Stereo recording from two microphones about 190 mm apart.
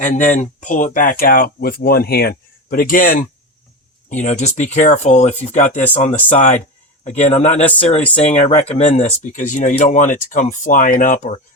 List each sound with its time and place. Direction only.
0.3 s speech: 40° left (ahead or behind)
7.6 s speech: 10° left (ahead or behind)
8.1 s speech: 35° left (ahead or behind)